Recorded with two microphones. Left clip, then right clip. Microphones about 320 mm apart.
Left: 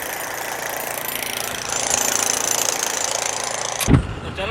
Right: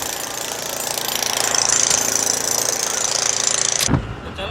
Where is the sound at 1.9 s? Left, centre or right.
Left.